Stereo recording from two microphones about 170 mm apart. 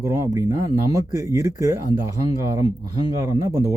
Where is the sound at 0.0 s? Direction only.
15° right (ahead or behind).